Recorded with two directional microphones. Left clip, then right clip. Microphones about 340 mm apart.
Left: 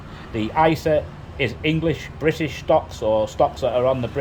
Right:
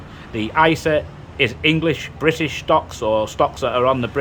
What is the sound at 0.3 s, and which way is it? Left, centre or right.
A man's voice, centre.